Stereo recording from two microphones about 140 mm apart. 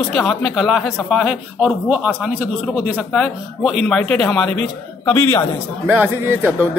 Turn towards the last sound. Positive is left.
turn(degrees=-15)  # may be behind; listen again after turning